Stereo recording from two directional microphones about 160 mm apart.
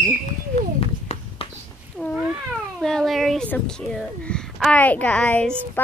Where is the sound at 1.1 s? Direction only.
45° left (ahead or behind).